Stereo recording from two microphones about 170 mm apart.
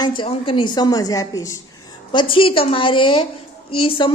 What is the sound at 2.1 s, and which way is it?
A woman's voice, 30° left (ahead or behind).